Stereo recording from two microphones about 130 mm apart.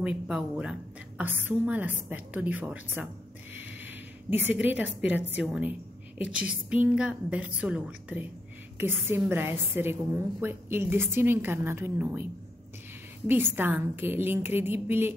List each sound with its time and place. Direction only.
0.0 s a woman's voice: 5° right (ahead or behind)
13.3 s a woman's voice: 15° right (ahead or behind)